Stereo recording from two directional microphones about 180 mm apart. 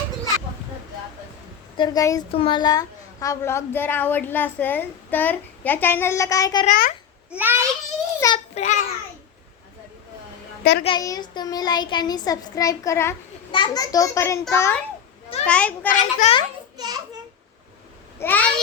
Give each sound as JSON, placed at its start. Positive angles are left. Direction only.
{"t": 1.7, "sound": "child singing", "side_deg": 25}
{"t": 2.3, "sound": "a woman's voice", "side_deg": 30}
{"t": 6.7, "sound": "a child's voice", "side_deg": 50}
{"t": 7.3, "sound": "a child's voice", "side_deg": -10}
{"t": 8.2, "sound": "a child's voice", "side_deg": 15}
{"t": 8.5, "sound": "a child's voice", "side_deg": 40}
{"t": 10.6, "sound": "a child's voice", "side_deg": 60}
{"t": 10.8, "sound": "child singing", "side_deg": 20}
{"t": 14.5, "sound": "a woman's voice", "side_deg": 15}
{"t": 15.9, "sound": "a child's voice", "side_deg": 40}
{"t": 16.7, "sound": "a child's voice", "side_deg": -25}
{"t": 18.2, "sound": "a woman's voice", "side_deg": 10}